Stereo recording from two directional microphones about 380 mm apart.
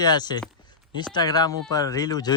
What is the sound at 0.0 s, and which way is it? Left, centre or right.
Speech, centre.